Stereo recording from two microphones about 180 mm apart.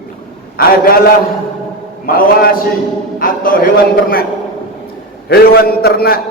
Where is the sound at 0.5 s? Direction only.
55° left (ahead or behind).